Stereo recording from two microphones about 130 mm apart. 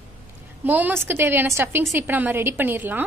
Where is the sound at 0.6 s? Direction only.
15° right (ahead or behind).